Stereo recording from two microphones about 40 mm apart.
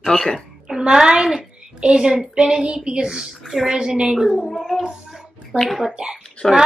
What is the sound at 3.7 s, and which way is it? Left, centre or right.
Speech, centre.